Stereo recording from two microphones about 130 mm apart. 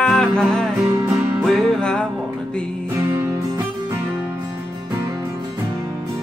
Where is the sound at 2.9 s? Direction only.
20° right (ahead or behind).